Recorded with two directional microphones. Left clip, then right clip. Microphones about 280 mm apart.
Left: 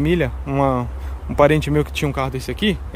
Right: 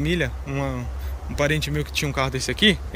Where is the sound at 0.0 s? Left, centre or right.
Centre.